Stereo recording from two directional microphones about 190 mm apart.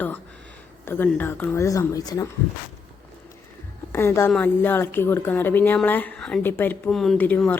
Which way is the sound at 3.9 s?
15° left (ahead or behind).